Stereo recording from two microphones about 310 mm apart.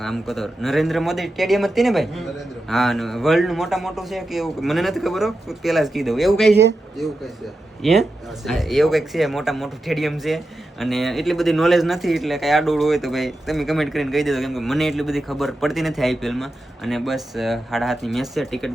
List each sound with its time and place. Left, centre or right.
0.0 s speech: centre
6.5 s speech: right
7.8 s speech: centre